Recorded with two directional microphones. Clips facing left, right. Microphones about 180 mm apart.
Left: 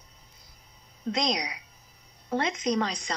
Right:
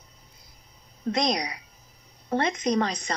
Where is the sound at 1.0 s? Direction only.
55° right (ahead or behind).